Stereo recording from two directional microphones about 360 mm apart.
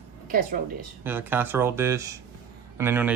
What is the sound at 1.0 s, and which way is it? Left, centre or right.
Speech, centre.